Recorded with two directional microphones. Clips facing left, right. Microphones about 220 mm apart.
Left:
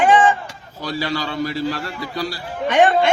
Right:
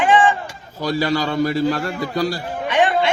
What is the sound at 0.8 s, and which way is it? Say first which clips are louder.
A man's voice: right 4 dB; 45° right (ahead or behind).